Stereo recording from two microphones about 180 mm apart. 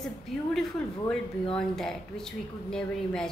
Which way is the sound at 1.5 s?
5° left (ahead or behind).